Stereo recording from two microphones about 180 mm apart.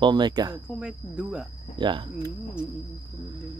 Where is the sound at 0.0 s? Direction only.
25° right (ahead or behind).